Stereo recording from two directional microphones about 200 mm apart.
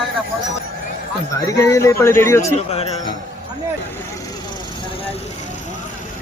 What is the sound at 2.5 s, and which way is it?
Speech, 30° left (ahead or behind).